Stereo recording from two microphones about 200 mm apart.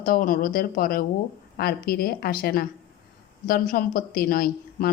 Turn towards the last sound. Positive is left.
turn(degrees=45)  # may be behind; listen again after turning